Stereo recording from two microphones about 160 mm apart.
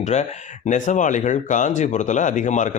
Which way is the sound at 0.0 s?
45° left (ahead or behind).